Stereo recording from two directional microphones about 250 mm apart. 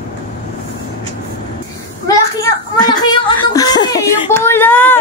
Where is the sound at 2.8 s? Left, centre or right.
Centre.